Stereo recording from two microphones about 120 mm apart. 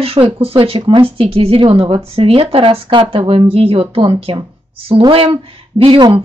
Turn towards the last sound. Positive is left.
turn(degrees=-35)  # may be behind; listen again after turning